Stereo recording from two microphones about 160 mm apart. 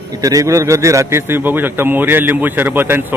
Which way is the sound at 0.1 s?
20° right (ahead or behind).